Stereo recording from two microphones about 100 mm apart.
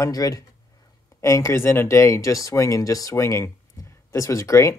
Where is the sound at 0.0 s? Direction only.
35° left (ahead or behind).